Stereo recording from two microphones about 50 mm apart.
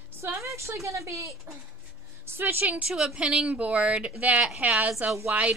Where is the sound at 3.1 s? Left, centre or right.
Right.